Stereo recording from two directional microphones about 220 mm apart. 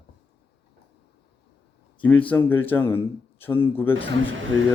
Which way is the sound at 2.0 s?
5° left (ahead or behind).